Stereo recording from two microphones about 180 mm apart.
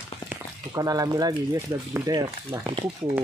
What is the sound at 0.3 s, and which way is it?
Speech, 20° right (ahead or behind).